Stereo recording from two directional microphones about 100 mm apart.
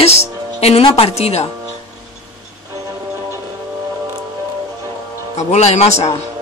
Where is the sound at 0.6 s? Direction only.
90° left.